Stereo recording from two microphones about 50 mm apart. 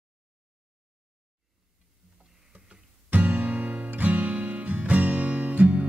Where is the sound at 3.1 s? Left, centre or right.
Right.